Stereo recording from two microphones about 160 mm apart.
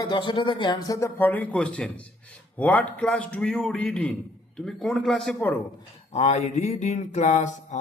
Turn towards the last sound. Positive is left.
turn(degrees=45)  # may be behind; listen again after turning